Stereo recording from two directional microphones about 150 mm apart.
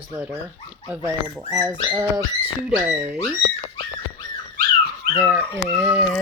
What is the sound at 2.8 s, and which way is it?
Speech, 15° right (ahead or behind).